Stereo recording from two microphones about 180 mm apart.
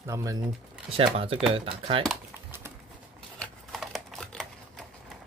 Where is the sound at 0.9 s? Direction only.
30° right (ahead or behind).